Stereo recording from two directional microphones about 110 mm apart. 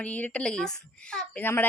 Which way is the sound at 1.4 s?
20° left (ahead or behind).